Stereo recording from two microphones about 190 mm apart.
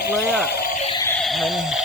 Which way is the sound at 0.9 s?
15° left (ahead or behind).